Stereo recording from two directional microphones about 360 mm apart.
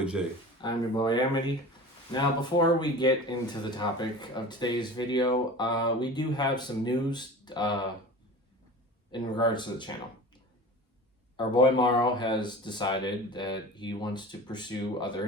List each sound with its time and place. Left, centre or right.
0.6 s speech: centre
9.1 s speech: centre
11.3 s speech: centre